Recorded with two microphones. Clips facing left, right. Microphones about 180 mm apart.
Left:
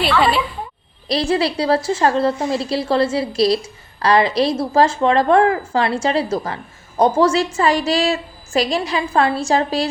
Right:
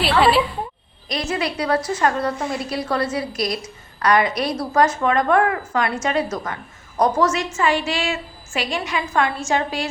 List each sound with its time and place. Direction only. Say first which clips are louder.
0.0 s a woman's voice: even; 5° right (ahead or behind)
1.0 s a woman's voice: left 6 dB; 30° left (ahead or behind)